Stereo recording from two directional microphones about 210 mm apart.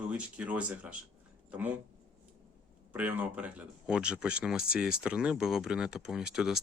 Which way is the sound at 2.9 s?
10° right (ahead or behind).